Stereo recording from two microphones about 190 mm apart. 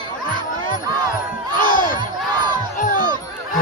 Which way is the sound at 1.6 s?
45° left (ahead or behind).